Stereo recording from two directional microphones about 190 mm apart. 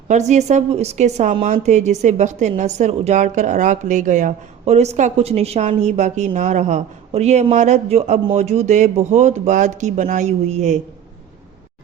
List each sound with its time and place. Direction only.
0.1 s a woman's voice: 40° right (ahead or behind)